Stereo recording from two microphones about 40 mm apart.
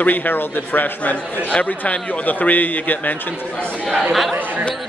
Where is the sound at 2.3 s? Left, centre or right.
Left.